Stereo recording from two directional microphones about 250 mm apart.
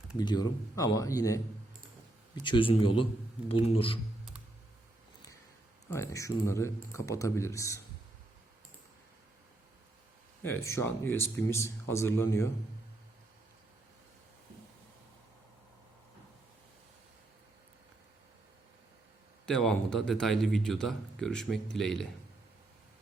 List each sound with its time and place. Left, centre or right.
0.2 s a man's voice: centre
5.9 s speech: centre
10.4 s speech: centre
19.5 s speech: centre